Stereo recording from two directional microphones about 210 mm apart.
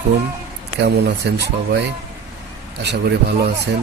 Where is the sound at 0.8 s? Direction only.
55° right (ahead or behind).